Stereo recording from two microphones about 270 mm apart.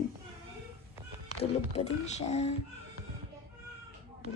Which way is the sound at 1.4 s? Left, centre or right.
Left.